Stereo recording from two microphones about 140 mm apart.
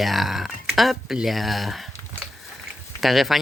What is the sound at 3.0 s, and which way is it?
Speech, centre (ahead or behind).